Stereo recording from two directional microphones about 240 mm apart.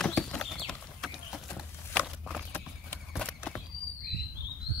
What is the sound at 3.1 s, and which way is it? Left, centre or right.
Horse, centre.